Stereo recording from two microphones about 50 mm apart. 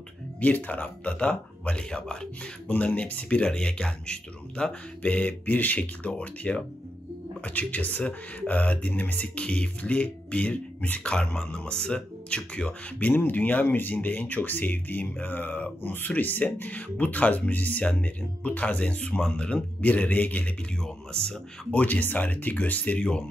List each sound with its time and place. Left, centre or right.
0.4 s speech: left
3.4 s speech: centre
13.1 s speech: left
15.8 s speech: left
16.7 s speech: left
20.8 s speech: centre
21.7 s speech: left
22.9 s speech: centre